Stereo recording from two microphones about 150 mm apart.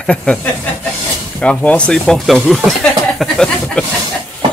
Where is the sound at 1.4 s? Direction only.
10° left (ahead or behind).